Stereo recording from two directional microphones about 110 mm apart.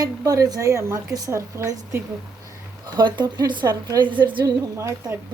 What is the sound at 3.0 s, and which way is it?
Speech, 40° right (ahead or behind).